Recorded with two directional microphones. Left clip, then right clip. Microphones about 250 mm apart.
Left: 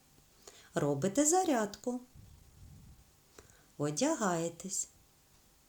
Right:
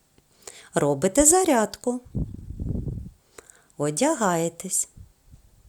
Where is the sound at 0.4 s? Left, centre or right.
Right.